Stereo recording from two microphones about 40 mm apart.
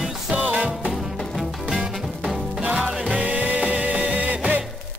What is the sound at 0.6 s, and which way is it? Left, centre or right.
Music, right.